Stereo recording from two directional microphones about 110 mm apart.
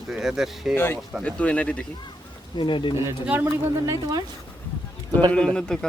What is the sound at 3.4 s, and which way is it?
Speech, 25° right (ahead or behind).